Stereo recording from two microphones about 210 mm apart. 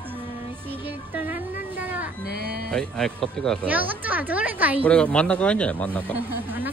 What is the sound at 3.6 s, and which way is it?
Speech, 10° right (ahead or behind).